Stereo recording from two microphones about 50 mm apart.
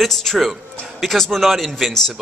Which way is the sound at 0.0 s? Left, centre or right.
Centre.